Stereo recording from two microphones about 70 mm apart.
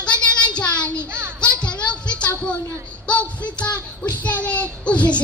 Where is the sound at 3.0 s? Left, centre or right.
Centre.